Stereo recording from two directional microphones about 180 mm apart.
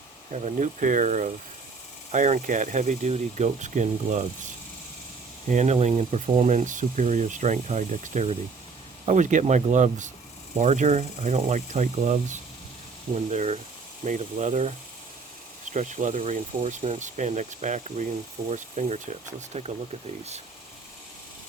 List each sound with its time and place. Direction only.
0.3 s speech: 40° right (ahead or behind)
5.5 s speech: 40° right (ahead or behind)
15.7 s speech: 40° right (ahead or behind)